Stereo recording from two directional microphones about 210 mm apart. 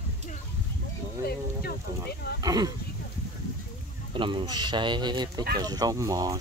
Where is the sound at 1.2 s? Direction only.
45° left (ahead or behind).